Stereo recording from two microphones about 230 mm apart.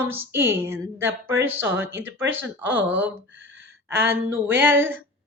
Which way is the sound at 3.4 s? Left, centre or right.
Right.